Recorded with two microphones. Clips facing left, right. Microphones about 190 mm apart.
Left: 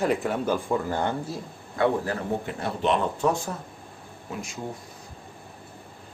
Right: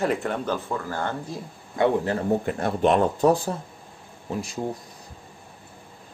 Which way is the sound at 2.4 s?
50° right (ahead or behind).